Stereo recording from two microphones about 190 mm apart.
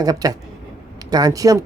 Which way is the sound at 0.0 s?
20° right (ahead or behind).